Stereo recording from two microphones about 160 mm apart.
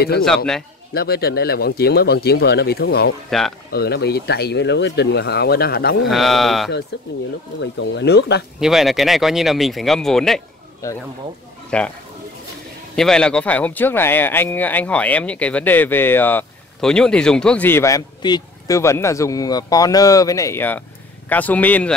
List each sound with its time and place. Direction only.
0.9 s speech: 75° left (ahead or behind)
3.3 s speech: centre (ahead or behind)
3.7 s speech: 85° left
6.0 s speech: centre (ahead or behind)
6.9 s speech: 90° left
8.5 s speech: centre (ahead or behind)
11.7 s speech: 5° left (ahead or behind)
12.9 s speech: 5° left (ahead or behind)